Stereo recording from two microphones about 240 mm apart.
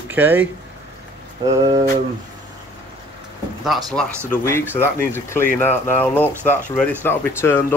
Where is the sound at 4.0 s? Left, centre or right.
Centre.